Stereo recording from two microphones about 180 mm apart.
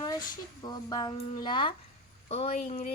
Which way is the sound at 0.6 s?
20° left (ahead or behind).